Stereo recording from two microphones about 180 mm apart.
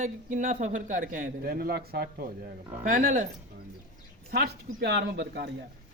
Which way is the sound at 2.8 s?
45° right (ahead or behind).